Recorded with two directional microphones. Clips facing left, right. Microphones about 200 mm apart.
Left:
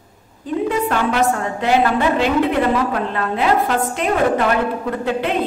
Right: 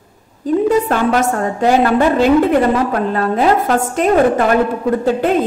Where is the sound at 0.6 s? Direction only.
40° right (ahead or behind).